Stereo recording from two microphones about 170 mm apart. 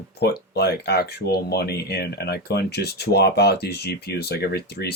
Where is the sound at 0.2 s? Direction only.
70° left (ahead or behind).